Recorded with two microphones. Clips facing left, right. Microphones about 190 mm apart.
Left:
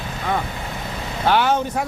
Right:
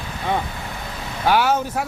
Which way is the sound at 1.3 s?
10° right (ahead or behind).